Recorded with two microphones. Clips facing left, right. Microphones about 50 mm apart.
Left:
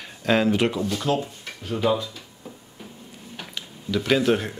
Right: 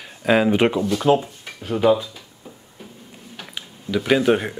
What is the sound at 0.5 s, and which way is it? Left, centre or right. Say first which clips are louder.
Speech: right 5 dB; right.